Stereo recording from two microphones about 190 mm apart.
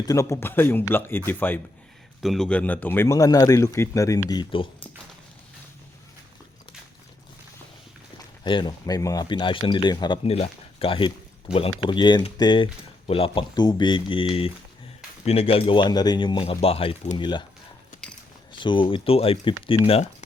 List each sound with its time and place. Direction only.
0.0 s speech: 15° left (ahead or behind)
8.4 s speech: 25° left (ahead or behind)
18.5 s speech: 25° left (ahead or behind)